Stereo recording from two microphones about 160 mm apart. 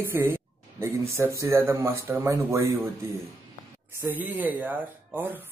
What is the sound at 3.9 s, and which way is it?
Speech, 15° right (ahead or behind).